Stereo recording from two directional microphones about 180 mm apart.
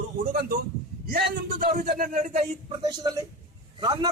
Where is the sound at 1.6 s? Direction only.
45° right (ahead or behind).